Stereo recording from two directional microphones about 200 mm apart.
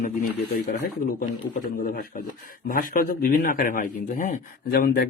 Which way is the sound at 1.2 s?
45° left (ahead or behind).